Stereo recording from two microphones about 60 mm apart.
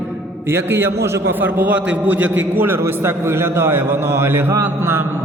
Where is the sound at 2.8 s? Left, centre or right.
Right.